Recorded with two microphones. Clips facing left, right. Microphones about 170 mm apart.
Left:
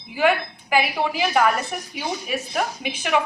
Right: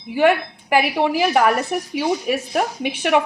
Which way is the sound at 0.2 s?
60° right (ahead or behind).